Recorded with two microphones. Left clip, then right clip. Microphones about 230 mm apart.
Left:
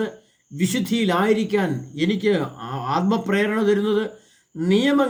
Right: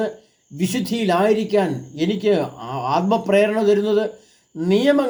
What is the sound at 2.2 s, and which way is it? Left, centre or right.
Speech, right.